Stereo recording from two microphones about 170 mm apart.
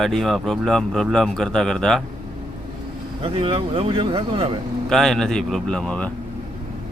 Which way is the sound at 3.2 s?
35° right (ahead or behind).